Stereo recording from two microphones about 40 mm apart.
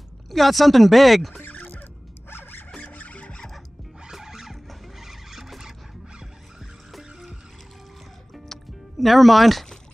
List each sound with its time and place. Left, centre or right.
0.3 s speech: centre
1.6 s music: left
2.8 s squeal: left
4.1 s music: centre
4.6 s vehicle: centre
6.9 s music: centre
9.0 s speech: centre